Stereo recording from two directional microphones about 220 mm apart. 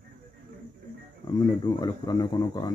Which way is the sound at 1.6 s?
20° left (ahead or behind).